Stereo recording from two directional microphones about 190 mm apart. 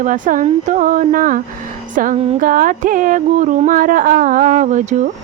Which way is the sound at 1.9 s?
45° right (ahead or behind).